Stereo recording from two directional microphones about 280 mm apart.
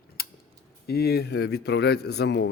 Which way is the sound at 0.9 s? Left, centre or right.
Left.